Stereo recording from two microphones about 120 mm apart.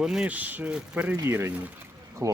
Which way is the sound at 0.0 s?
5° right (ahead or behind).